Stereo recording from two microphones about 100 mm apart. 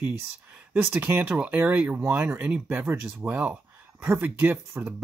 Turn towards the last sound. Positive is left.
turn(degrees=-20)  # may be behind; listen again after turning